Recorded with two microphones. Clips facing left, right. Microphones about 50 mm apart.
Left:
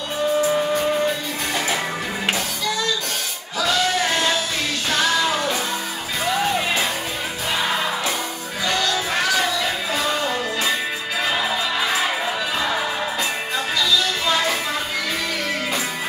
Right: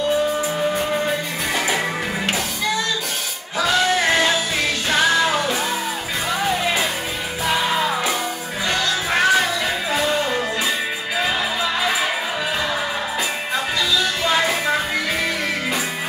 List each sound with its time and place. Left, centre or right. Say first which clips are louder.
4.8 s music: right 2 dB; centre
8.6 s music: even; right
13.7 s music: left 1 dB; centre